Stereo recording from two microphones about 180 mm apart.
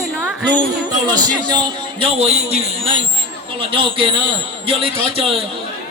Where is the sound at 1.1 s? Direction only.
25° right (ahead or behind).